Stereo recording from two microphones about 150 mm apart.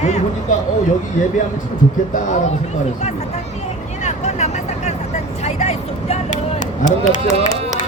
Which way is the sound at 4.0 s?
50° left (ahead or behind).